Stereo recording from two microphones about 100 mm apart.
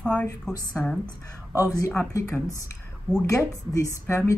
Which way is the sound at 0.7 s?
5° left (ahead or behind).